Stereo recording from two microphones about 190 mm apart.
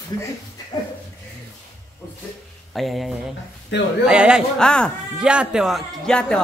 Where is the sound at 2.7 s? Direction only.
Centre (ahead or behind).